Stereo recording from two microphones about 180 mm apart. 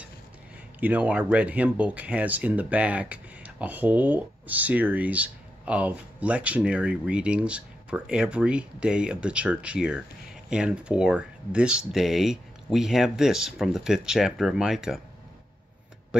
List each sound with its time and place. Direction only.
0.7 s speech: 10° right (ahead or behind)